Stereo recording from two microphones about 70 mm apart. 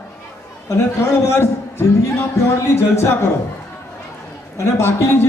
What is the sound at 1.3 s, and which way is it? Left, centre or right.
A man's voice, left.